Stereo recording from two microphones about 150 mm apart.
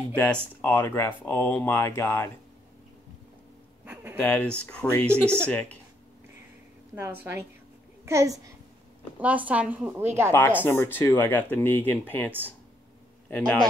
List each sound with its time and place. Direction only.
0.1 s speech: 10° left (ahead or behind)
3.8 s a sound: 15° right (ahead or behind)
4.2 s speech: 10° left (ahead or behind)
8.0 s a woman's voice: 20° right (ahead or behind)
9.2 s a woman's voice: 10° right (ahead or behind)
10.3 s speech: 15° left (ahead or behind)
13.3 s a man's voice: 5° left (ahead or behind)